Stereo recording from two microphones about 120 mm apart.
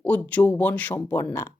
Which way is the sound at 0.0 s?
15° left (ahead or behind).